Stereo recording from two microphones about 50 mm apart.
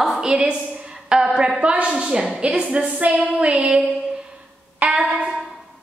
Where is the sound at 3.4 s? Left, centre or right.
Right.